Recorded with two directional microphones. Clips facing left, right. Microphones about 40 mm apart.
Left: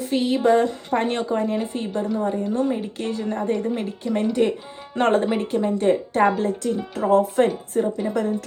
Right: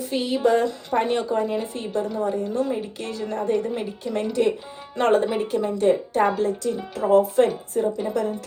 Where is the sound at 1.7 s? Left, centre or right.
Centre.